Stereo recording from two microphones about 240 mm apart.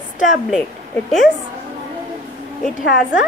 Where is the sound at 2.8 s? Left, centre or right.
Left.